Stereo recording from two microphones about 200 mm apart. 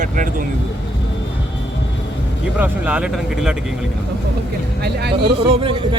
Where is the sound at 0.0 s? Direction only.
40° right (ahead or behind).